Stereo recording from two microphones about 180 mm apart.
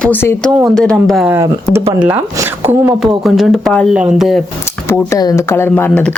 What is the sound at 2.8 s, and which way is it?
Speech, 20° right (ahead or behind).